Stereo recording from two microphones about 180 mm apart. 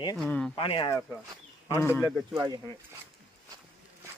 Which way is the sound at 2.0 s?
Centre (ahead or behind).